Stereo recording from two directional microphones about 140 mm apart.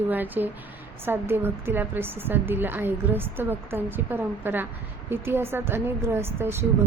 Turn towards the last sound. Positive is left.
turn(degrees=-15)  # may be behind; listen again after turning